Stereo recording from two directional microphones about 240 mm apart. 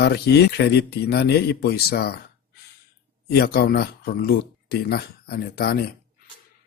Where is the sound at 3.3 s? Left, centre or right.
Left.